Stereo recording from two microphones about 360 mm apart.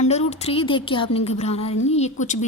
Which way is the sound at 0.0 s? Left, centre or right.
Centre.